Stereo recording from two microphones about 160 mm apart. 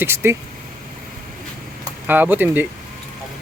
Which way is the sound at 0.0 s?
15° right (ahead or behind).